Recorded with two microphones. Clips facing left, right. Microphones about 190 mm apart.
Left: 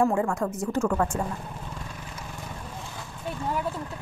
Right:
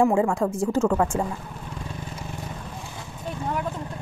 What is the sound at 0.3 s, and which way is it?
Speech, 30° right (ahead or behind).